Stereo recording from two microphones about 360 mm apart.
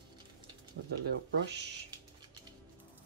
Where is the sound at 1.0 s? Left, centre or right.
Right.